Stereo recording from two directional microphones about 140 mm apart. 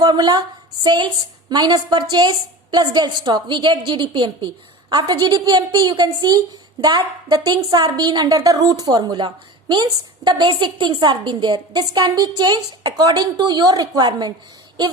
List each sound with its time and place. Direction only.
0.0 s a woman's voice: 30° right (ahead or behind)